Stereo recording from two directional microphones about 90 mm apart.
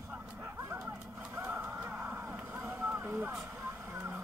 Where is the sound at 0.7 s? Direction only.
15° right (ahead or behind).